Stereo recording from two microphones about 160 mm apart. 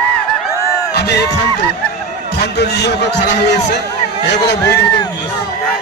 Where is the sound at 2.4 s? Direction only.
90° left.